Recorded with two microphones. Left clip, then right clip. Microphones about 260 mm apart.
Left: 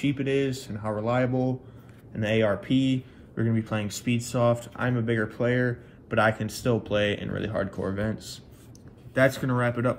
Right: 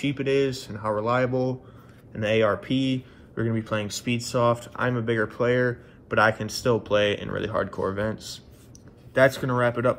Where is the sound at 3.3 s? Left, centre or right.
Centre.